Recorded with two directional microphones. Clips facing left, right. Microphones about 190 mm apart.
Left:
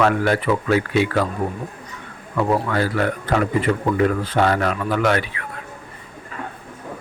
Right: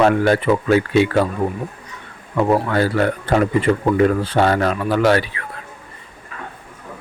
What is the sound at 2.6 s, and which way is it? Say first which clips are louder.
Speech: right 3 dB; 30° right (ahead or behind).